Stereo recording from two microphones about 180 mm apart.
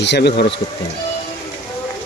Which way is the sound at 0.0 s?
70° left (ahead or behind).